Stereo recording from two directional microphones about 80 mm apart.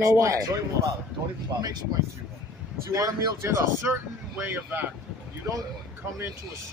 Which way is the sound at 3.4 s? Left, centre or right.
Right.